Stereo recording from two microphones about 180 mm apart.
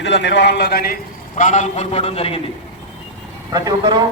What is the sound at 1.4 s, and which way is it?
A man's voice, 40° left (ahead or behind).